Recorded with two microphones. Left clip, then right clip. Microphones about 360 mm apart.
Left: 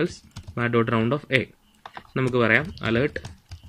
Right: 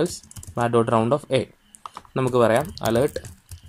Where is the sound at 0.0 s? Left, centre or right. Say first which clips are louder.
Right 2 dB; centre.